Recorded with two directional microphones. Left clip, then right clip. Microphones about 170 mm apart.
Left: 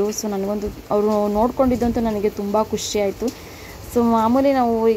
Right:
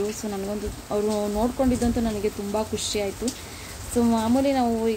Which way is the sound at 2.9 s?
10° left (ahead or behind).